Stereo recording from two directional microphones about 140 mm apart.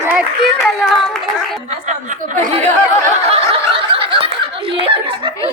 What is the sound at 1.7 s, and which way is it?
Speech, 60° right (ahead or behind).